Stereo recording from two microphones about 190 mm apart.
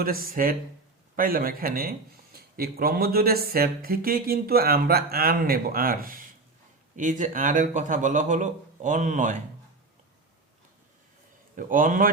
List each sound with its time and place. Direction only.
0.0 s a man's voice: 50° right (ahead or behind)
11.5 s speech: 45° right (ahead or behind)